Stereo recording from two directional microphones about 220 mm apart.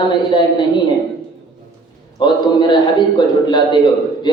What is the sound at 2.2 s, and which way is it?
A man's voice, 20° left (ahead or behind).